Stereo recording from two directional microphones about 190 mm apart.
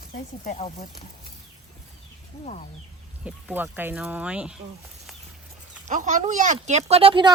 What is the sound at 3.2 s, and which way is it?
Speech, 10° right (ahead or behind).